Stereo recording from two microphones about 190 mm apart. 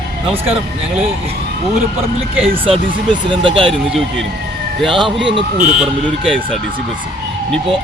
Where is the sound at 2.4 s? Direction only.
30° right (ahead or behind).